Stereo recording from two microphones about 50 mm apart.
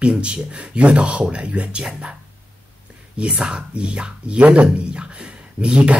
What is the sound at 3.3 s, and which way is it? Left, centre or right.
Speech, centre.